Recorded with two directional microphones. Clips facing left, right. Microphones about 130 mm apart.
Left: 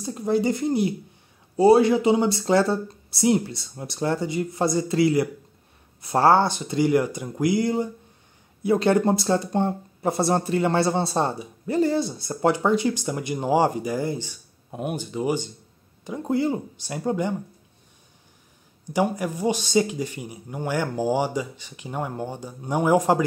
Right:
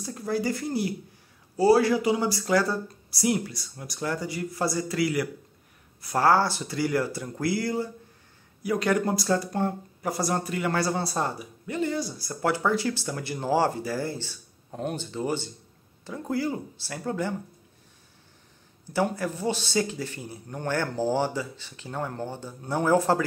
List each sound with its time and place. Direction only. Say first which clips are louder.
0.0 s speech: left 5 dB; 20° left (ahead or behind)
18.9 s speech: left 3 dB; 15° left (ahead or behind)